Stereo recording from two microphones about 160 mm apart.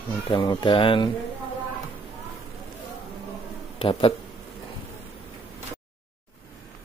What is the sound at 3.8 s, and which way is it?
Speech, 35° left (ahead or behind).